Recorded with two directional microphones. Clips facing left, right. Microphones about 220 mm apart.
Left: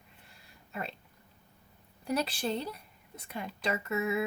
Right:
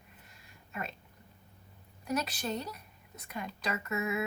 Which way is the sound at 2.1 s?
30° left (ahead or behind).